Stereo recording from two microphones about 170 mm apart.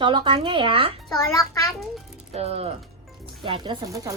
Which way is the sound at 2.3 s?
40° right (ahead or behind).